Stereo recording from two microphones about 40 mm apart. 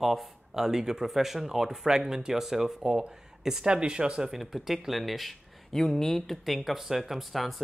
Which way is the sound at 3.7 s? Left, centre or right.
Right.